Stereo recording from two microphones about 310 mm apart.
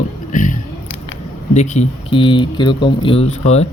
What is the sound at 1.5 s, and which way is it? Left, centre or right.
Speech, left.